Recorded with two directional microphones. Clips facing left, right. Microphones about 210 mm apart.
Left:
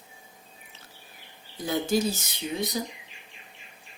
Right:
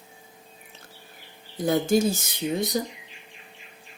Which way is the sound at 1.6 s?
50° right (ahead or behind).